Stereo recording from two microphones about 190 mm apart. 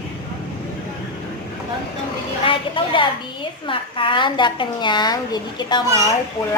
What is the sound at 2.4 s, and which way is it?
A woman's voice, 25° left (ahead or behind).